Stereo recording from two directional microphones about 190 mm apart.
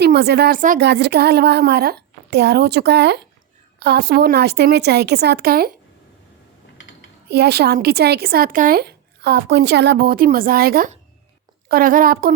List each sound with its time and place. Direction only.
0.0 s speech: 60° right (ahead or behind)
0.8 s speech: 60° right (ahead or behind)
7.3 s a woman's voice: 60° right (ahead or behind)